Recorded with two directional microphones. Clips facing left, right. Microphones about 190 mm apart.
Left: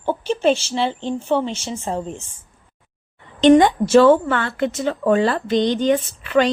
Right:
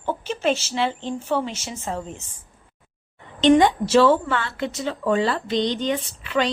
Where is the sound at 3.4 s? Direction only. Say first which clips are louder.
Left 4 dB; 50° left (ahead or behind).